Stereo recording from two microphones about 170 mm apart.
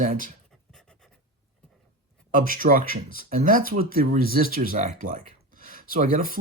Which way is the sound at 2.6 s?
55° right (ahead or behind).